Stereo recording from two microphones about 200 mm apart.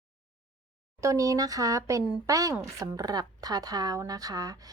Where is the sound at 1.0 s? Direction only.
15° right (ahead or behind).